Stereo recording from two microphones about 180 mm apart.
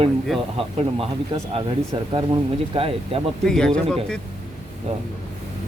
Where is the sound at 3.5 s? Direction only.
5° left (ahead or behind).